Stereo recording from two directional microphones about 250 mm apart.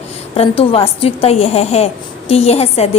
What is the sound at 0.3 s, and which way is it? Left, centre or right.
A woman's voice, left.